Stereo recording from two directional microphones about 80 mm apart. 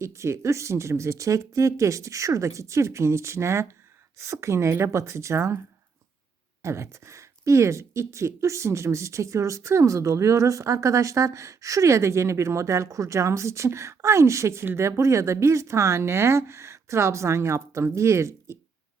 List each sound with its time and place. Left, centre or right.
0.0 s speech: right
6.6 s speech: right